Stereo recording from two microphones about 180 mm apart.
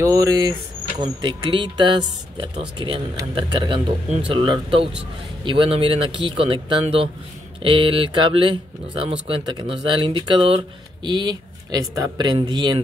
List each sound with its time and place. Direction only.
0.0 s speech: 20° right (ahead or behind)